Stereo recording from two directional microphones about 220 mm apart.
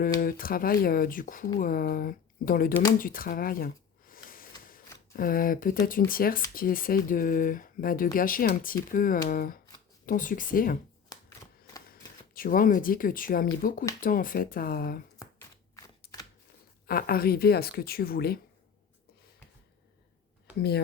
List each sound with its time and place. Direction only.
0.2 s speech: 40° left (ahead or behind)
11.1 s typewriter: 15° left (ahead or behind)
11.9 s speech: 40° left (ahead or behind)
15.2 s shuffling cards: 15° left (ahead or behind)
16.8 s speech: 40° left (ahead or behind)
20.6 s speech: 45° left (ahead or behind)